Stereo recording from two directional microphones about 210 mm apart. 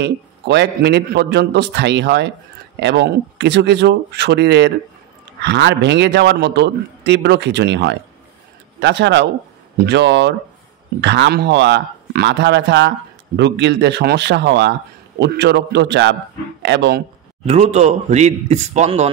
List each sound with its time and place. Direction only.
0.0 s a man's voice: 55° right (ahead or behind)
17.5 s a man's voice: 30° right (ahead or behind)